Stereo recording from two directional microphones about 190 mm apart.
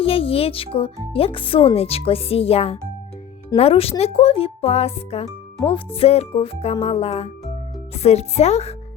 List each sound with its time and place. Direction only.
0.0 s speech: 30° left (ahead or behind)